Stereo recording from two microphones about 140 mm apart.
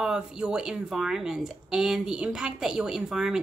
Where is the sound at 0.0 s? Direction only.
5° right (ahead or behind).